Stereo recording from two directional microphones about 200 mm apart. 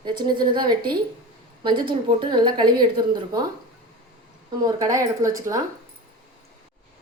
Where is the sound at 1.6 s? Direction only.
25° right (ahead or behind).